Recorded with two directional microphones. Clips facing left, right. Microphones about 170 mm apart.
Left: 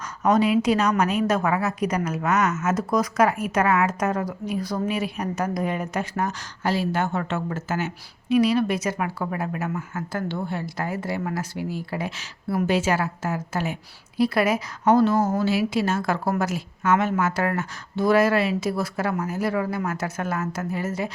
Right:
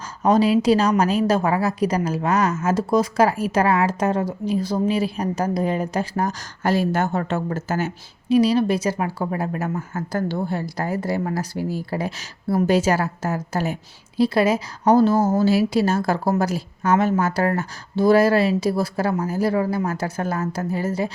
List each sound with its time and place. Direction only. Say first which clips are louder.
0.2 s a woman's voice: right 3 dB; 30° right (ahead or behind)
6.6 s a woman's voice: right 4 dB; 45° right (ahead or behind)
14.2 s a woman's voice: right 3 dB; 30° right (ahead or behind)